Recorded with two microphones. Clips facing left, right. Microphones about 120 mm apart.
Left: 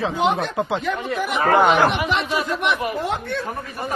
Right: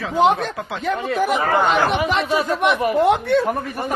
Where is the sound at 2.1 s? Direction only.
40° right (ahead or behind).